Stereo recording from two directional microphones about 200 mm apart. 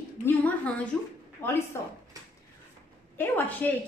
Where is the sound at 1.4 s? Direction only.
10° left (ahead or behind).